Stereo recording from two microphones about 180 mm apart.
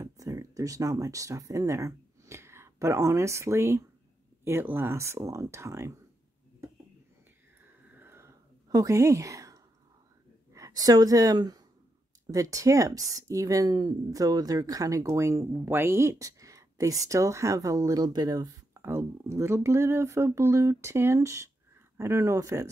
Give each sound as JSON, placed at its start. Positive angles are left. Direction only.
{"t": 0.0, "sound": "speech", "side_deg": -20}
{"t": 7.9, "sound": "a sound", "side_deg": -10}
{"t": 10.5, "sound": "speech", "side_deg": -20}